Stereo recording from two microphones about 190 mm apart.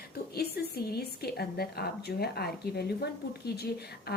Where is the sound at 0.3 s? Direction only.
55° left (ahead or behind).